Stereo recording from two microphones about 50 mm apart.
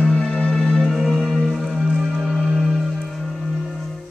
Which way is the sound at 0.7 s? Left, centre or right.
Centre.